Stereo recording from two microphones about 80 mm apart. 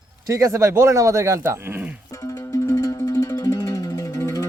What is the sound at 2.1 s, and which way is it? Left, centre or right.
Music, left.